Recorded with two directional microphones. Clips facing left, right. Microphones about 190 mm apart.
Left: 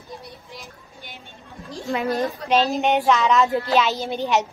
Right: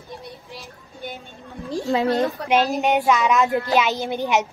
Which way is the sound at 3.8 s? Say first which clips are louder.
Even; 15° right (ahead or behind).